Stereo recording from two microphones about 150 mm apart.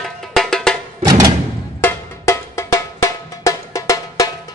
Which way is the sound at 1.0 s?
25° right (ahead or behind).